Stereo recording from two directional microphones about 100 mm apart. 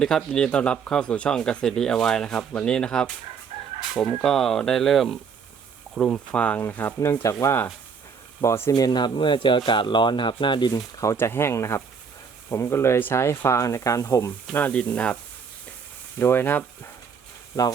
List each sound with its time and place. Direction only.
0.0 s speech: 5° left (ahead or behind)
3.8 s fowl: centre (ahead or behind)
5.9 s speech: 5° left (ahead or behind); by 8.7 s 30° left (ahead or behind)
8.7 s speech: 45° left (ahead or behind)
10.9 s speech: 30° left (ahead or behind)
14.5 s speech: 15° left (ahead or behind)